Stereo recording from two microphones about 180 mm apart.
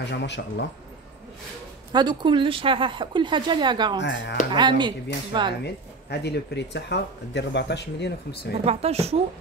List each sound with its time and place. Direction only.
0.0 s speech: 75° left (ahead or behind)
1.9 s speech: 25° right (ahead or behind)
4.0 s speech: 80° left
4.6 s speech: 25° right (ahead or behind)
5.6 s speech: 65° left (ahead or behind)
8.6 s a woman's voice: 35° right (ahead or behind)